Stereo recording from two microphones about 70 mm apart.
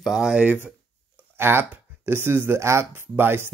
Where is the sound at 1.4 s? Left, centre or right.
Right.